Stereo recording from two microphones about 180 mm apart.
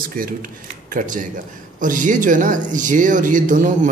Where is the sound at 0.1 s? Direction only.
50° right (ahead or behind).